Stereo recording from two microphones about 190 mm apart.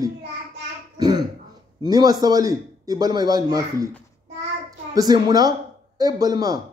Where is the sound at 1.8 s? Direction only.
20° right (ahead or behind).